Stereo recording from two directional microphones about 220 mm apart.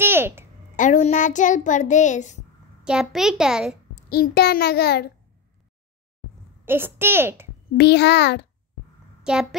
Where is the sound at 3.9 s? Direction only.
45° left (ahead or behind).